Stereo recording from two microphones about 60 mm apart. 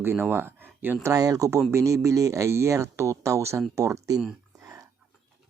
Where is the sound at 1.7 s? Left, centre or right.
Right.